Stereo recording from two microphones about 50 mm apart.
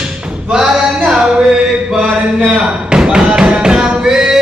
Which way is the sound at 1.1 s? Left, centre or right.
Centre.